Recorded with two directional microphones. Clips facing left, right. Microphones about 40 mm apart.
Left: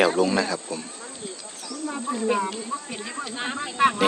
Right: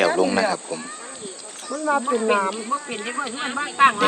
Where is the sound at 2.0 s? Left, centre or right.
Right.